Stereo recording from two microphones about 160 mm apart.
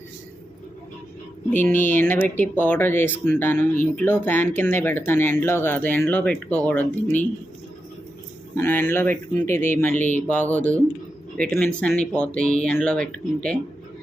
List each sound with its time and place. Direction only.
1.6 s speech: 10° left (ahead or behind)
8.5 s speech: 15° left (ahead or behind)